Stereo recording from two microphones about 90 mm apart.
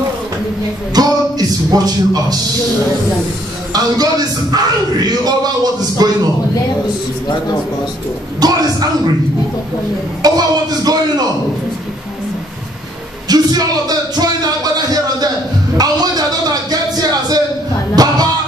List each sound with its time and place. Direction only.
0.9 s speech: 45° right (ahead or behind)
3.7 s speech: 45° right (ahead or behind)
8.4 s speech: 45° right (ahead or behind)
10.2 s speech: 45° right (ahead or behind)
13.3 s speech: 45° right (ahead or behind)
15.8 s a sound: 45° right (ahead or behind)
17.9 s music: 45° right (ahead or behind)